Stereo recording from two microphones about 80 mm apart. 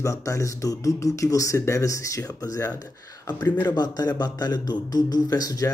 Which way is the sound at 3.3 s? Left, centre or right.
Left.